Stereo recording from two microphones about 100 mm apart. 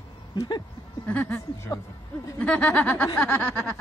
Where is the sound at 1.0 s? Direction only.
15° left (ahead or behind).